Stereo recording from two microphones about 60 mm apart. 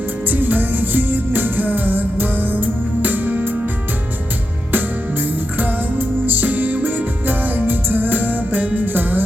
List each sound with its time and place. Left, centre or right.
0.3 s music: right
5.5 s music: right